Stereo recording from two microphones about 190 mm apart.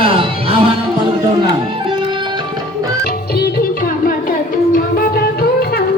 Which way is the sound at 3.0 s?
55° left (ahead or behind).